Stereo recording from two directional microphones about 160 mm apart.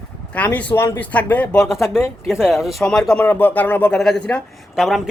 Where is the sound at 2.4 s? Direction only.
Centre (ahead or behind).